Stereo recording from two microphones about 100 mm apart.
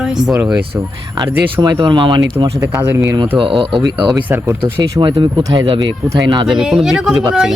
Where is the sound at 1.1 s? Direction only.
45° right (ahead or behind).